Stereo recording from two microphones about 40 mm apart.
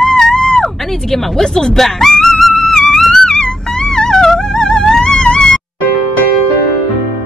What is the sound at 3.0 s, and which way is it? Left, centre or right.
Music, centre.